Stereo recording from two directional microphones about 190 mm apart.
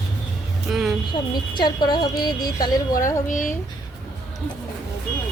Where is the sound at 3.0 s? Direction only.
45° left (ahead or behind).